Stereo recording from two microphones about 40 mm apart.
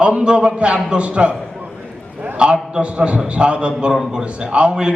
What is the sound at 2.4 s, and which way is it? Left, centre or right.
A man's voice, right.